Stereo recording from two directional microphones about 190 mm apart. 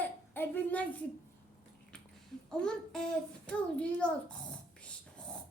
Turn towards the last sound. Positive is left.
turn(degrees=5)  # may be behind; listen again after turning